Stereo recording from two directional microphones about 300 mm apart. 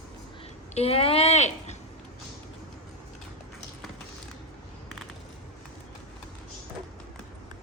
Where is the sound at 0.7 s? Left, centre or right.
Centre.